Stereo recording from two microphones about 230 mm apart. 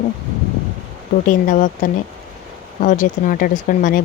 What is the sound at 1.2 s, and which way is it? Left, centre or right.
Speech, left.